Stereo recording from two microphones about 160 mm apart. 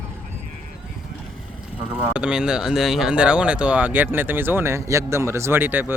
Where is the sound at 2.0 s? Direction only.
5° right (ahead or behind).